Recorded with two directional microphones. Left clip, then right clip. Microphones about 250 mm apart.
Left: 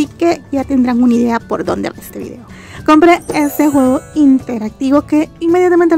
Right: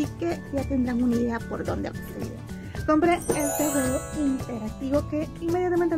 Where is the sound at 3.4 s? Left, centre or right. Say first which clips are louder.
Left 13 dB; centre.